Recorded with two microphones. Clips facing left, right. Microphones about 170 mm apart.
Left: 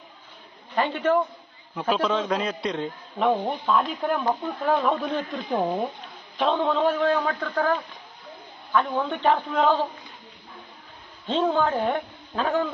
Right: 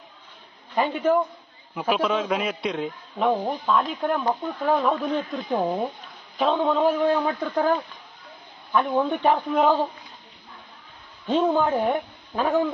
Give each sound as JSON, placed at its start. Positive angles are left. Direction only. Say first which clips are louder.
{"t": 0.8, "sound": "a man's voice", "louder": "right 1 dB", "side_deg": -5}
{"t": 8.7, "sound": "a man's voice", "louder": "right 2 dB", "side_deg": -15}
{"t": 11.3, "sound": "a man's voice", "louder": "right 2 dB", "side_deg": -15}